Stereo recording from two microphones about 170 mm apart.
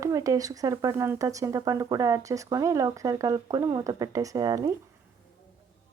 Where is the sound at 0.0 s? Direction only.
20° right (ahead or behind).